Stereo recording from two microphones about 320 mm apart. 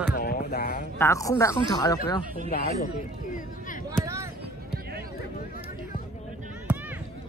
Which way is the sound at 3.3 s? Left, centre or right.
Left.